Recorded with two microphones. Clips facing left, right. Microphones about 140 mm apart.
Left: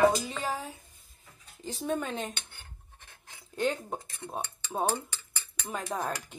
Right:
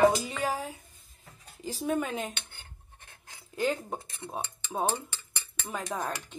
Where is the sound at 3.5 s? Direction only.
Centre (ahead or behind).